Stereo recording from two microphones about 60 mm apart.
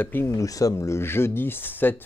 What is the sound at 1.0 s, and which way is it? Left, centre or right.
Speech, left.